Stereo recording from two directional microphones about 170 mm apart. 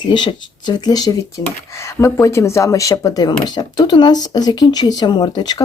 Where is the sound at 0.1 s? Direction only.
25° left (ahead or behind).